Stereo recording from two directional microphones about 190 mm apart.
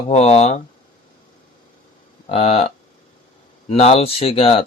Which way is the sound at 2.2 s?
30° left (ahead or behind).